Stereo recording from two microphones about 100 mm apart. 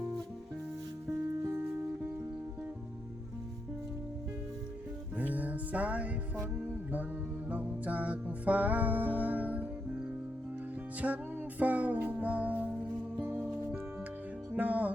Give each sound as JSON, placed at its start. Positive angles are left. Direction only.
{"t": 1.5, "sound": "music", "side_deg": -25}
{"t": 5.1, "sound": "music", "side_deg": -15}
{"t": 7.5, "sound": "music", "side_deg": -15}
{"t": 11.0, "sound": "music", "side_deg": -15}
{"t": 14.5, "sound": "music", "side_deg": -15}